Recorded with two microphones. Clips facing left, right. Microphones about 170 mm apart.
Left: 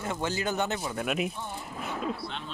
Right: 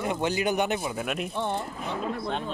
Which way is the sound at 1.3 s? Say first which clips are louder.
Right 9 dB; 75° right (ahead or behind).